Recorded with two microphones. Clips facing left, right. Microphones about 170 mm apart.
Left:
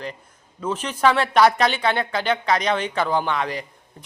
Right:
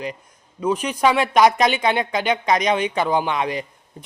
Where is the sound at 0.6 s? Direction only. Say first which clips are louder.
Right 2 dB; 15° right (ahead or behind).